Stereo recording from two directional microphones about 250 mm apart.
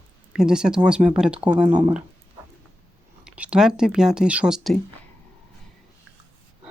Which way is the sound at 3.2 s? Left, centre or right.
Centre.